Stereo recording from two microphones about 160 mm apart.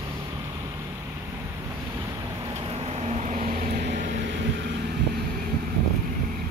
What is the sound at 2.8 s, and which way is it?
Vehicle, 40° right (ahead or behind).